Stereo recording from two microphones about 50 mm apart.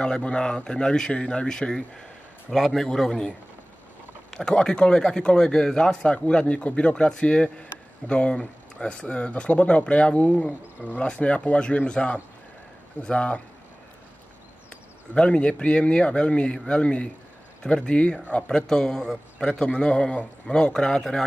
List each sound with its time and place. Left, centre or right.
0.0 s speech: centre
15.1 s speech: left